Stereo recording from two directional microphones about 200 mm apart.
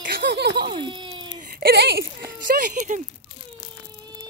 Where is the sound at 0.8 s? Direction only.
25° right (ahead or behind).